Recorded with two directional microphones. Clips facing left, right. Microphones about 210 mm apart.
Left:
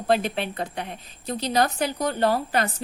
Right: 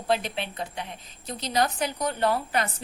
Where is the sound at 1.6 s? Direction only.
35° left (ahead or behind).